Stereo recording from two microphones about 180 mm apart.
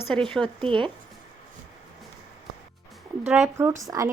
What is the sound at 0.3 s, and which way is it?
Speech, 5° left (ahead or behind).